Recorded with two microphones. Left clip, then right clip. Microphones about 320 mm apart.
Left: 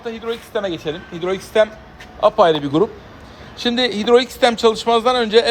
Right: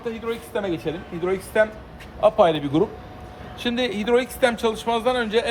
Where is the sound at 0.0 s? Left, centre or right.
Centre.